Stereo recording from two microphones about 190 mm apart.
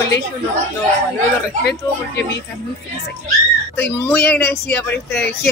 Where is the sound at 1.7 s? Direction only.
60° left (ahead or behind).